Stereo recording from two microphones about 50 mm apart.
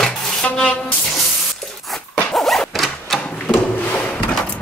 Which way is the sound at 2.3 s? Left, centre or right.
Centre.